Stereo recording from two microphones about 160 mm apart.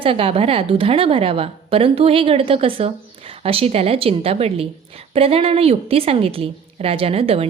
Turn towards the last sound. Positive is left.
turn(degrees=-40)  # may be behind; listen again after turning